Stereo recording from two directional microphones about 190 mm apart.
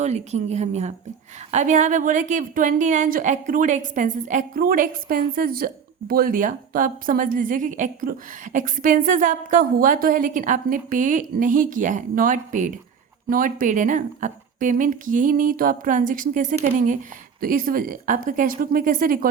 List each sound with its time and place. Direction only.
0.0 s a woman's voice: 35° right (ahead or behind)